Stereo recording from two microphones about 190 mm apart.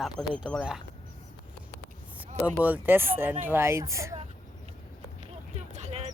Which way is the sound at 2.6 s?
10° right (ahead or behind).